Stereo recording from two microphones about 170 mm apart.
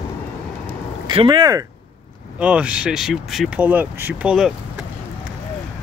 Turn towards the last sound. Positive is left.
turn(degrees=-5)  # may be behind; listen again after turning